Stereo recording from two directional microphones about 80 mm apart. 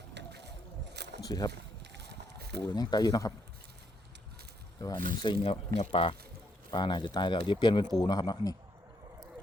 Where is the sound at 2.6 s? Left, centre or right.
Left.